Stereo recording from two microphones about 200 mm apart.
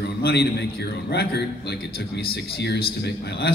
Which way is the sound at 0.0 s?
55° left (ahead or behind).